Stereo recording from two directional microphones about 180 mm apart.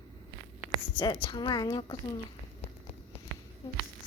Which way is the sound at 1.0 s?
25° left (ahead or behind).